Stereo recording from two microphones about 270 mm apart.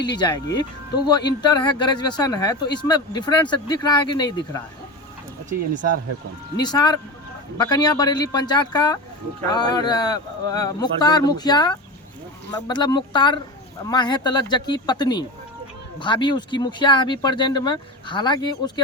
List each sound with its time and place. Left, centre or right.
0.2 s speech: centre
5.7 s speech: right
6.6 s speech: centre